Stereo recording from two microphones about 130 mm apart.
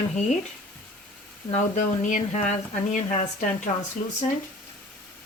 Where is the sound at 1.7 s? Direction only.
75° left (ahead or behind).